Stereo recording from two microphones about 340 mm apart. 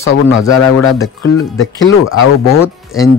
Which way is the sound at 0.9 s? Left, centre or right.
Centre.